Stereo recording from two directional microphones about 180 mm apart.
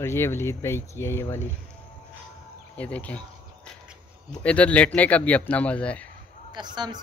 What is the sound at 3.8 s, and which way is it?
Speech, 5° left (ahead or behind).